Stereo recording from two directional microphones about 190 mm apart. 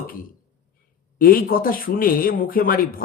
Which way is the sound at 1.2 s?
50° left (ahead or behind).